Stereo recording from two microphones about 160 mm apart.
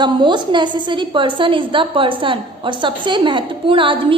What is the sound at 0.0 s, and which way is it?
A woman's voice, 30° right (ahead or behind).